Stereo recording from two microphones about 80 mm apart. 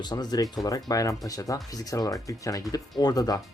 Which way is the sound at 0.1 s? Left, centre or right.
Left.